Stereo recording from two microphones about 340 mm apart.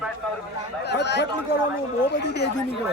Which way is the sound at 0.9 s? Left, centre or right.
Left.